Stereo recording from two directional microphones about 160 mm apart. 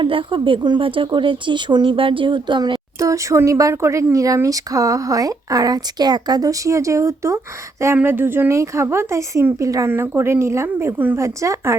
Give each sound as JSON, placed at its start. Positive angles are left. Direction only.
{"t": 0.0, "sound": "speech", "side_deg": -30}